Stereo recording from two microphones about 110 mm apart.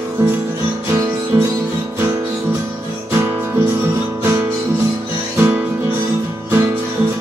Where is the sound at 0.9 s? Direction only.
20° right (ahead or behind).